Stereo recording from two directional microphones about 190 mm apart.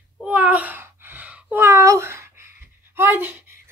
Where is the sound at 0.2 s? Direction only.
5° right (ahead or behind).